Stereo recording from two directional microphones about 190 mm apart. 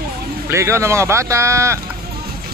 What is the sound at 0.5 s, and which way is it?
Speech, 15° right (ahead or behind).